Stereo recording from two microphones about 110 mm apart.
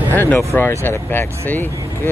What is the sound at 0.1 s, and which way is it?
Speech, 15° left (ahead or behind).